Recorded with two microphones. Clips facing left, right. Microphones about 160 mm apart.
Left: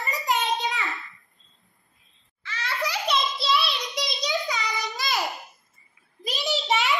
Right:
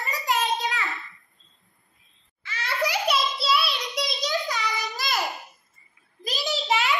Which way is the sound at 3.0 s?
Centre (ahead or behind).